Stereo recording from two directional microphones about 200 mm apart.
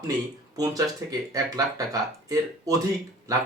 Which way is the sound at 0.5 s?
20° right (ahead or behind).